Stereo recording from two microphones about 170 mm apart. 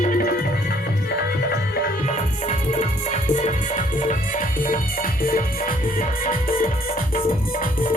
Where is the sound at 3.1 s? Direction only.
45° left (ahead or behind).